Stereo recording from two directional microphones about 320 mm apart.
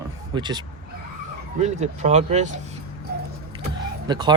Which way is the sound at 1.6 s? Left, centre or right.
Right.